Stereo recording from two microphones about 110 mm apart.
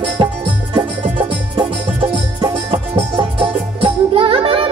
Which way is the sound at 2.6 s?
55° right (ahead or behind).